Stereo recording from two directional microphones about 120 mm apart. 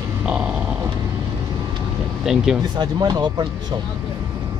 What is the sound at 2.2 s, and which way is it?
Speech, 5° right (ahead or behind).